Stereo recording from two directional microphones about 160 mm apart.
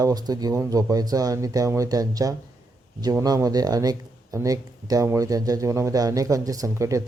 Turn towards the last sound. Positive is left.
turn(degrees=-20)  # may be behind; listen again after turning